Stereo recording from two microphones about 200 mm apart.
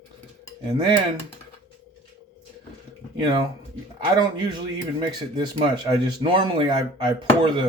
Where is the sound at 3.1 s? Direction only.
20° right (ahead or behind).